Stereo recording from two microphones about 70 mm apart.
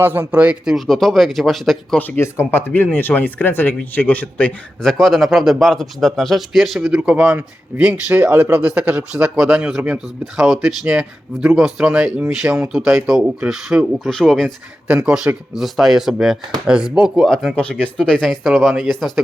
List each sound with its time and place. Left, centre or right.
0.0 s speech: right
0.9 s a man's voice: centre
2.1 s speech: left
4.8 s a man's voice: centre
6.9 s speech: centre
9.8 s speech: right
10.3 s a man's voice: centre
10.8 s speech: centre
11.4 s speech: centre
12.4 s speech: right
13.1 s a man's voice: centre
14.0 s speech: centre
14.8 s a man's voice: centre
17.5 s a man's voice: centre